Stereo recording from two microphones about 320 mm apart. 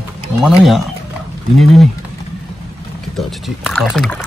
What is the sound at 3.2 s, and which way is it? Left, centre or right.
Speech, centre.